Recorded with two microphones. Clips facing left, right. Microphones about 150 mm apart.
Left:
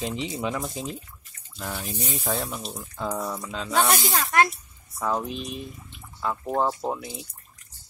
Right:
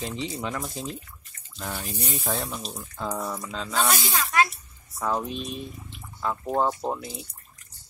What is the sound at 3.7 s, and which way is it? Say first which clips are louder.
Speech: left 3 dB; 55° left (ahead or behind).